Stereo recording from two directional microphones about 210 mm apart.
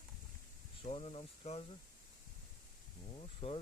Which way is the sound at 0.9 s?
30° left (ahead or behind).